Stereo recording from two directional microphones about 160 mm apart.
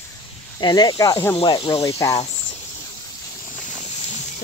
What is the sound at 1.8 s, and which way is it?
Speech, 20° left (ahead or behind).